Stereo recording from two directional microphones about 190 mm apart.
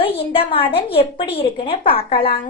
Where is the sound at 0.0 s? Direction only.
30° left (ahead or behind).